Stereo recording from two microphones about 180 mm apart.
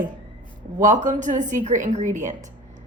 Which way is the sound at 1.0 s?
45° right (ahead or behind).